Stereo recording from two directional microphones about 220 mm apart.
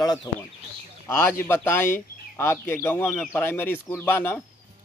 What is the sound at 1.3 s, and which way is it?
Speech, 10° left (ahead or behind).